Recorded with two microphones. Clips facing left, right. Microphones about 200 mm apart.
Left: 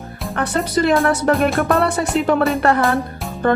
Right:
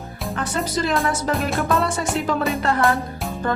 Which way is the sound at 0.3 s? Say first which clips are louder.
Left 6 dB; 60° left (ahead or behind).